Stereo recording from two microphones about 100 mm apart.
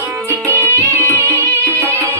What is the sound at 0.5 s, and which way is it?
Music, 20° left (ahead or behind).